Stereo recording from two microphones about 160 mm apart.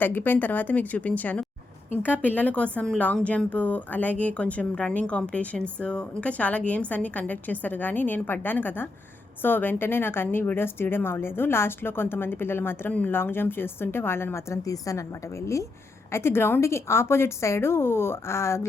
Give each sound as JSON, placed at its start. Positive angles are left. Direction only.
{"t": 0.0, "sound": "a woman's voice", "side_deg": 10}